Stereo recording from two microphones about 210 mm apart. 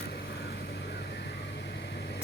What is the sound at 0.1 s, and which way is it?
Vehicle, 50° left (ahead or behind).